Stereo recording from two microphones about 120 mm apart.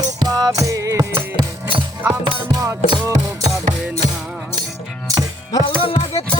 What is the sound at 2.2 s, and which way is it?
Music, 30° right (ahead or behind).